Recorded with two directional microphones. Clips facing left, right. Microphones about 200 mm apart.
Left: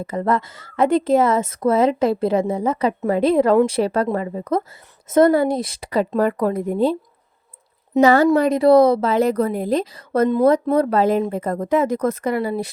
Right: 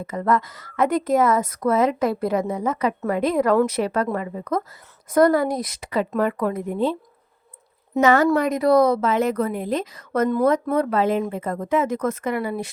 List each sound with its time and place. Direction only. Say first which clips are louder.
0.0 s a woman's voice: left 1 dB; 30° left (ahead or behind)
8.0 s a woman's voice: left 3 dB; 35° left (ahead or behind)